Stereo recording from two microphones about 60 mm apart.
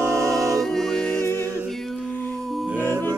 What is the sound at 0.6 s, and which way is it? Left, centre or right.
Music, centre.